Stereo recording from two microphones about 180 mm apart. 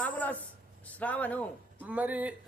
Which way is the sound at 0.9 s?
10° left (ahead or behind).